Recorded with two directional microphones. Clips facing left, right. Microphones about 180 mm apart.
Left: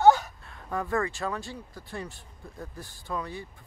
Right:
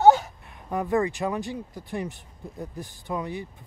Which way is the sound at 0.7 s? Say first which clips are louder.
Right 5 dB; 20° right (ahead or behind).